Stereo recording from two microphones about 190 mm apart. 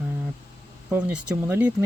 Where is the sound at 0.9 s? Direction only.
5° right (ahead or behind).